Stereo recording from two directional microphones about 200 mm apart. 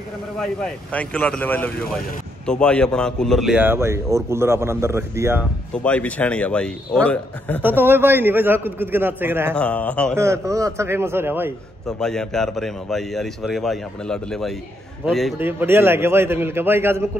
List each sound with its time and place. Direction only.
0.4 s a man's voice: 5° left (ahead or behind); by 5.4 s 15° right (ahead or behind)
5.7 s a man's voice: 5° left (ahead or behind)
7.6 s a man's voice: 10° right (ahead or behind)
9.6 s a man's voice: 5° left (ahead or behind)
10.1 s a man's voice: 15° right (ahead or behind)
12.0 s a man's voice: 5° left (ahead or behind)
15.3 s a man's voice: 10° right (ahead or behind)